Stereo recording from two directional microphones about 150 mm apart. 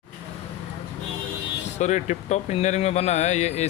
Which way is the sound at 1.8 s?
50° left (ahead or behind).